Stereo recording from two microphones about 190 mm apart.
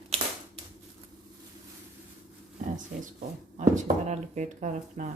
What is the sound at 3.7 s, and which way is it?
Speech, 40° right (ahead or behind).